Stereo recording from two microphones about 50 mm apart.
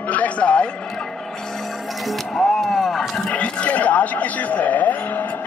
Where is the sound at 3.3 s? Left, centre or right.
Left.